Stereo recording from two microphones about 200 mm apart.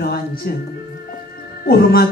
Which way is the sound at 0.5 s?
50° left (ahead or behind).